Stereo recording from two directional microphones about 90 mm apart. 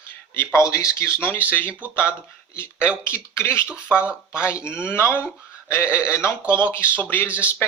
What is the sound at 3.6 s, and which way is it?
Speech, 15° right (ahead or behind).